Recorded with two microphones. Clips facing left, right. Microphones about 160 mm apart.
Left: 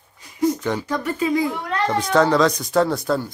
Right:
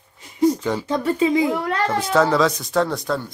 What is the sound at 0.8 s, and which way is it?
Speech, 25° right (ahead or behind).